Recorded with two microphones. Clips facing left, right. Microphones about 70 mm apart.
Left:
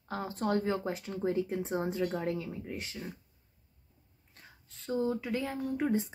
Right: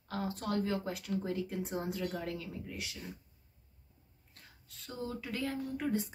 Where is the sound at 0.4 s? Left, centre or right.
Left.